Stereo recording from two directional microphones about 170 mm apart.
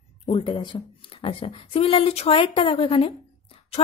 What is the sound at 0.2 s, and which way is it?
A woman's voice, 30° left (ahead or behind).